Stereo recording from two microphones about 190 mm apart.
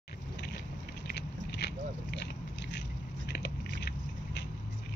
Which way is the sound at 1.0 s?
60° left (ahead or behind).